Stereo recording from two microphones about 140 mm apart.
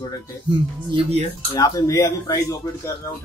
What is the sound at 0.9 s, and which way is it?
Speech, 40° right (ahead or behind).